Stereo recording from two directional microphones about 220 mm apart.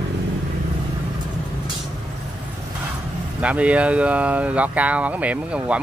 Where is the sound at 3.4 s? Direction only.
5° right (ahead or behind).